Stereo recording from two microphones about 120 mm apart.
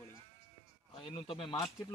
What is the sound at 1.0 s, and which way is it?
Speech, 45° left (ahead or behind).